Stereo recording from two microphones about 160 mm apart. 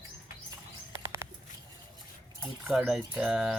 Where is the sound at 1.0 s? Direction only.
15° right (ahead or behind).